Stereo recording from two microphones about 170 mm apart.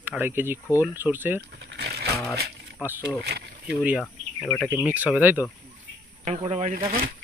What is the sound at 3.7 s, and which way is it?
Speech, 5° right (ahead or behind).